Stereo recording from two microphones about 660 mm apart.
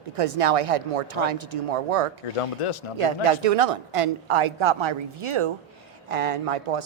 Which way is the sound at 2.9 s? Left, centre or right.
Right.